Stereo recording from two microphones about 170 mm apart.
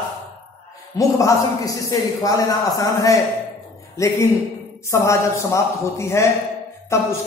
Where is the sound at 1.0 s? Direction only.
20° left (ahead or behind).